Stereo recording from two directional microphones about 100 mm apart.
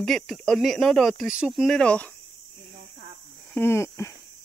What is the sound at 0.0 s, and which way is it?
Speech, 5° left (ahead or behind).